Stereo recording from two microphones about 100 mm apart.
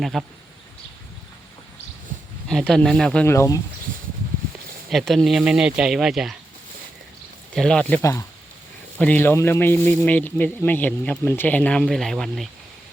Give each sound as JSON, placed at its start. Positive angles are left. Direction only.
{"t": 0.0, "sound": "speech", "side_deg": 0}
{"t": 2.5, "sound": "speech", "side_deg": 5}
{"t": 3.2, "sound": "speech", "side_deg": 30}
{"t": 4.9, "sound": "speech", "side_deg": 0}
{"t": 7.5, "sound": "speech", "side_deg": 5}